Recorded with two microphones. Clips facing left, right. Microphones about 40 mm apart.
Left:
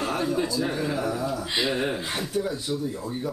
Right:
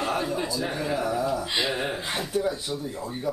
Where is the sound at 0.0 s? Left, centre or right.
Centre.